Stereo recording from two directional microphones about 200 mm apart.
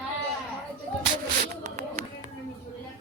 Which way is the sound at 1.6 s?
40° right (ahead or behind).